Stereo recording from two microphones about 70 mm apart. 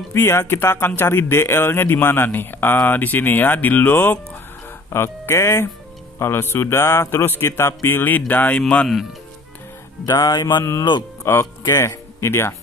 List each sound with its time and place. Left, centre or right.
0.1 s speech: left; by 8.8 s centre
10.1 s music: left
10.8 s speech: left
11.6 s speech: left